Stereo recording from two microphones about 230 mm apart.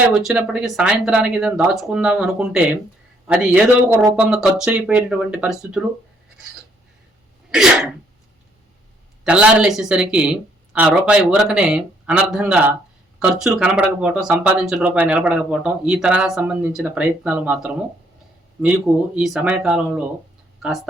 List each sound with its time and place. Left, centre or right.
0.1 s speech: centre
7.5 s speech: centre
9.2 s speech: centre
19.1 s speech: centre